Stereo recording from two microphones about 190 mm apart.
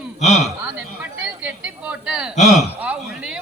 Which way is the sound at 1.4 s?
5° right (ahead or behind).